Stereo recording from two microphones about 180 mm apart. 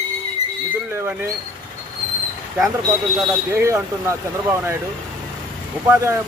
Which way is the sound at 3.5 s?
15° right (ahead or behind).